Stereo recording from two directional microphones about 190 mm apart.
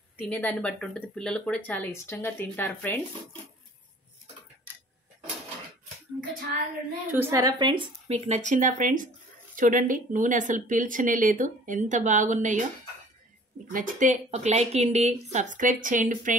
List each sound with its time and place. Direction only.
0.2 s speech: 10° left (ahead or behind)
7.1 s a woman's voice: 10° right (ahead or behind); by 12.6 s 40° right (ahead or behind)
13.7 s a woman's voice: 45° right (ahead or behind)